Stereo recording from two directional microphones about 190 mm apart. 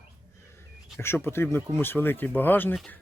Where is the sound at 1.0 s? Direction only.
10° left (ahead or behind).